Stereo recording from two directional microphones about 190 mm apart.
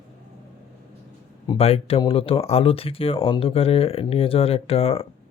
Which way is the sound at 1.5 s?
30° left (ahead or behind).